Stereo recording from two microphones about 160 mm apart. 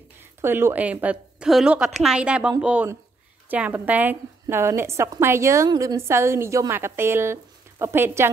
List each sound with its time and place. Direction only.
0.2 s a woman's voice: 15° right (ahead or behind)